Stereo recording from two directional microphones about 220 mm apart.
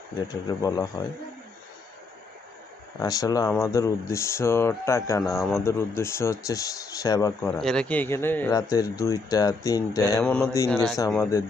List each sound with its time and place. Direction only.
0.5 s speech: 15° left (ahead or behind)
3.0 s speech: 15° left (ahead or behind)
7.4 s speech: 5° left (ahead or behind)